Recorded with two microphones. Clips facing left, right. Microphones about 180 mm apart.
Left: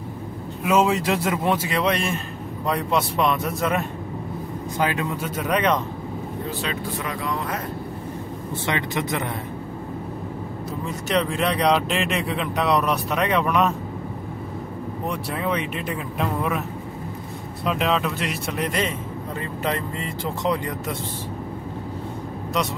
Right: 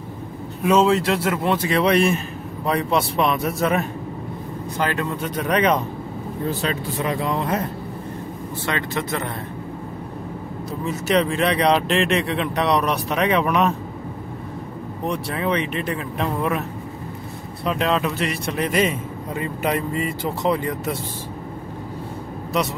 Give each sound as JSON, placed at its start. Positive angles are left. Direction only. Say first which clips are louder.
{"t": 0.7, "sound": "speech", "louder": "right 3 dB", "side_deg": 10}
{"t": 1.7, "sound": "a man's voice", "louder": "right 5 dB", "side_deg": 0}
{"t": 4.7, "sound": "speech", "louder": "even", "side_deg": 10}
{"t": 7.0, "sound": "speech", "louder": "right 5 dB", "side_deg": -25}
{"t": 8.6, "sound": "speech", "louder": "even", "side_deg": 15}
{"t": 10.9, "sound": "a man's voice", "louder": "right 4 dB", "side_deg": 0}
{"t": 15.0, "sound": "a man's voice", "louder": "right 3 dB", "side_deg": 0}
{"t": 17.6, "sound": "a man's voice", "louder": "right 1 dB", "side_deg": 0}